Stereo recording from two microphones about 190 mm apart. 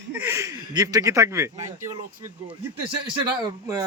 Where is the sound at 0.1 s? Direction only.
10° right (ahead or behind).